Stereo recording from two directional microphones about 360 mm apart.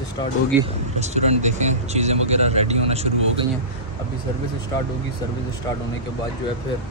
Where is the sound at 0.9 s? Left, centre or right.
Centre.